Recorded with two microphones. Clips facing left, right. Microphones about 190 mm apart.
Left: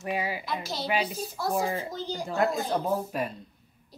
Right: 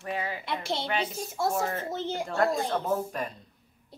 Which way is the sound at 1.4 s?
25° right (ahead or behind).